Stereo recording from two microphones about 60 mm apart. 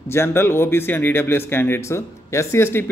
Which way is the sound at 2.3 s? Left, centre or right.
Left.